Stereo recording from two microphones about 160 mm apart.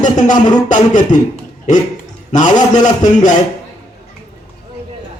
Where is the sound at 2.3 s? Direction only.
50° left (ahead or behind).